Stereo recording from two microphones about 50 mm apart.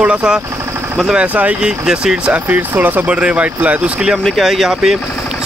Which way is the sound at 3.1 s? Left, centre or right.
Right.